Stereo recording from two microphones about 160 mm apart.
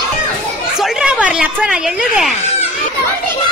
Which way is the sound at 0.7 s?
5° right (ahead or behind).